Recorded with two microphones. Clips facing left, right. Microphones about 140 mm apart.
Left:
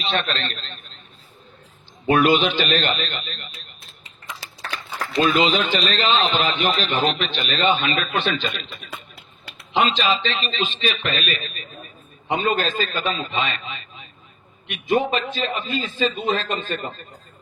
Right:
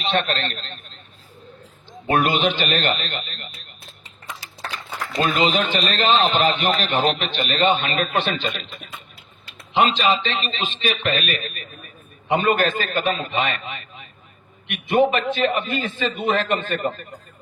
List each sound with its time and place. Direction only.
0.0 s a man's voice: 50° right (ahead or behind)
1.9 s a man's voice: 45° right (ahead or behind)
5.2 s a man's voice: 50° right (ahead or behind)
9.9 s a man's voice: 55° right (ahead or behind)